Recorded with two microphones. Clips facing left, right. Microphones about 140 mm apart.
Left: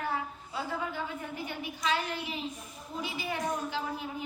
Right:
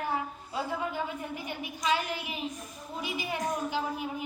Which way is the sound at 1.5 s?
15° right (ahead or behind).